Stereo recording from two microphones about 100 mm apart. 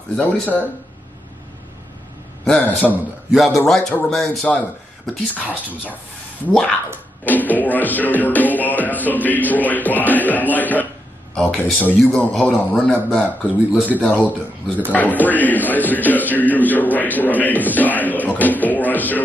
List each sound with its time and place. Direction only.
0.1 s a man's voice: 15° left (ahead or behind)
2.4 s a man's voice: 10° left (ahead or behind)
3.3 s a man's voice: centre (ahead or behind)
6.4 s a man's voice: 10° left (ahead or behind)
7.2 s music: 15° left (ahead or behind)
11.3 s a man's voice: 15° left (ahead or behind)
12.0 s a man's voice: 5° left (ahead or behind)
13.7 s speech: 15° right (ahead or behind)
14.0 s a man's voice: 15° left (ahead or behind)